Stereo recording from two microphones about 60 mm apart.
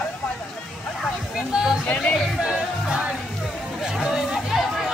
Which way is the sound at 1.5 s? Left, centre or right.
Centre.